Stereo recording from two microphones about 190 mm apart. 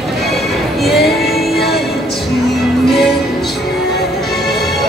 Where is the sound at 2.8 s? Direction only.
Centre (ahead or behind).